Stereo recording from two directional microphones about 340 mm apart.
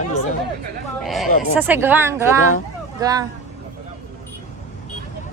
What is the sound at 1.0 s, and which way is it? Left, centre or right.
Speech, centre.